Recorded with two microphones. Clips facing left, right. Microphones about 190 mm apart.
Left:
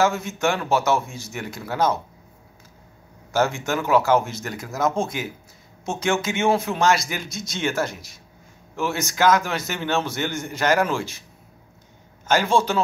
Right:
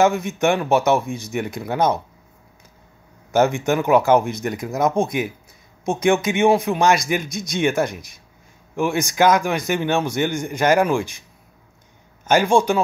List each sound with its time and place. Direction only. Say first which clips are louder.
0.0 s a man's voice: right 4 dB; 15° right (ahead or behind)
3.3 s a man's voice: right 5 dB; 15° right (ahead or behind)
12.3 s a man's voice: right 4 dB; 15° right (ahead or behind)